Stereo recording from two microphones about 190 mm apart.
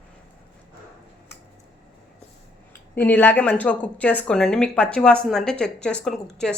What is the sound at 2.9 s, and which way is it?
A woman's voice, 10° left (ahead or behind).